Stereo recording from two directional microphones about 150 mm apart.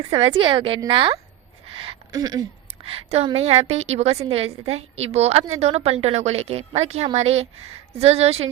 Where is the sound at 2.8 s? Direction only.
40° right (ahead or behind).